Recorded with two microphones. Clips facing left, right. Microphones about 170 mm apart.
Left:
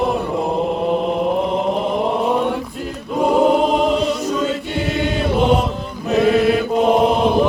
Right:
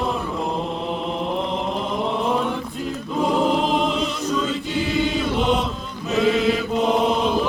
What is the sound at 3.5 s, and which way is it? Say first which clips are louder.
Music: left 5 dB; centre (ahead or behind).